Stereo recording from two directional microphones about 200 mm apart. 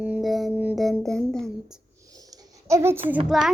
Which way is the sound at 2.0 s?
20° right (ahead or behind).